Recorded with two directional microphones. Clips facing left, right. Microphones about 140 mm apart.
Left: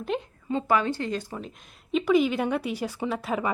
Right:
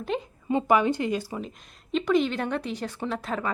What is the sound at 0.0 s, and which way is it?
Speech, centre (ahead or behind).